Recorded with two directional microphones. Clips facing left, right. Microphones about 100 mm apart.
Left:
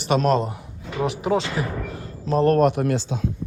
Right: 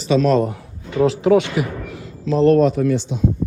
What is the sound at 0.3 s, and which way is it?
Speech, 25° left (ahead or behind).